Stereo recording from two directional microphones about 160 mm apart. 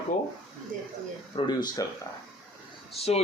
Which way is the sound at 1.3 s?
25° left (ahead or behind).